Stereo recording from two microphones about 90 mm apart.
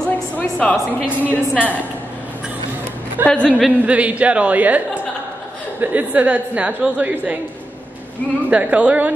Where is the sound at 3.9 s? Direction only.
15° right (ahead or behind).